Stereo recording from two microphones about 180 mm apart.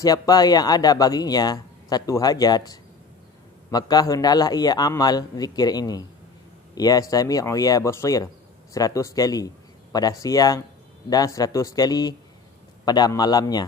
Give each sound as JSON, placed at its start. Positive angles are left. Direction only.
{"t": 0.0, "sound": "speech", "side_deg": 20}